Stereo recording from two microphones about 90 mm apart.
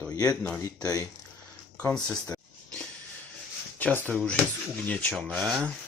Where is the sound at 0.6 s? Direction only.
45° left (ahead or behind).